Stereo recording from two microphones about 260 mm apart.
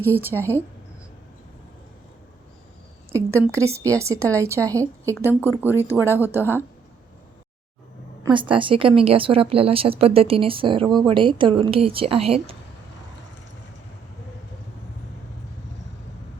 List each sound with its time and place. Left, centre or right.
0.0 s a woman's voice: centre
0.3 s a woman's voice: centre
3.1 s a woman's voice: centre
8.2 s speech: centre